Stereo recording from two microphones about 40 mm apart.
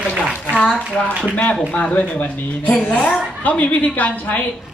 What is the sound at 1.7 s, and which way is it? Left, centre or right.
A woman's voice, left.